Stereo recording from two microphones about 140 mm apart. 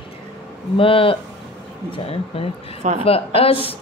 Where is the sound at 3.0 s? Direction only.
45° left (ahead or behind).